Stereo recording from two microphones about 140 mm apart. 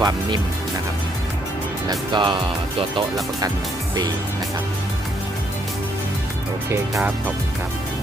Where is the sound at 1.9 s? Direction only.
35° right (ahead or behind).